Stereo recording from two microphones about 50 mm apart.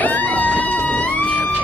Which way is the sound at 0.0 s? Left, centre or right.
Left.